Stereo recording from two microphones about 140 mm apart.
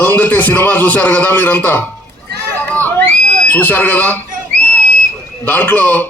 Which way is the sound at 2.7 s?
10° left (ahead or behind).